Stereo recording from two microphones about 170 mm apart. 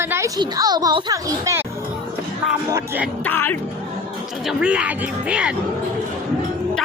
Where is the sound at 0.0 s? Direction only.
15° right (ahead or behind).